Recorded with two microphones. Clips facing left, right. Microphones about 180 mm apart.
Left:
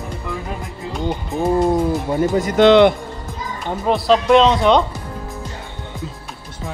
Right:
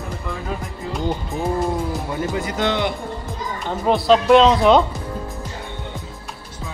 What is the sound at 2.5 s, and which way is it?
Speech, 65° left (ahead or behind).